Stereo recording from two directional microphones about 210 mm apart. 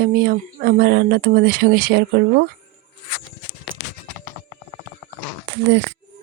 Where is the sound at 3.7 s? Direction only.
70° right (ahead or behind).